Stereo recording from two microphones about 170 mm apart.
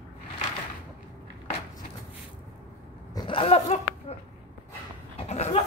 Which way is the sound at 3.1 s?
30° left (ahead or behind).